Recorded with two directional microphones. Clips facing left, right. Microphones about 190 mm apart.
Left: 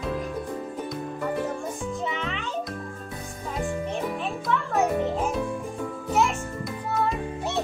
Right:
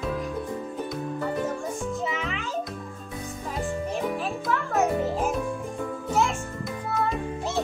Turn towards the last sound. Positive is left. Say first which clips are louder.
# left 1 dB
turn(degrees=0)  # may be behind; listen again after turning